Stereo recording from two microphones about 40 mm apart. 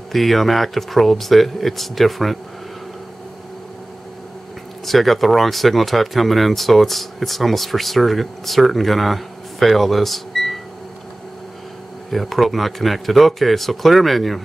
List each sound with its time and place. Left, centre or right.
0.1 s speech: centre
4.8 s speech: centre
12.1 s speech: centre